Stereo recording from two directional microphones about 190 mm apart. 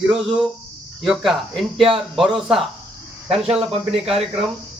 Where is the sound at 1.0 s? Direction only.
Centre (ahead or behind).